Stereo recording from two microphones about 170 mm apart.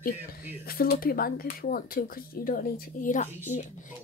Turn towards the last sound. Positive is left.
turn(degrees=45)  # may be behind; listen again after turning